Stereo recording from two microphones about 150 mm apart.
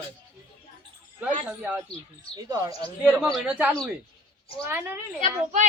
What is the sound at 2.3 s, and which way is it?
Speech, 25° right (ahead or behind).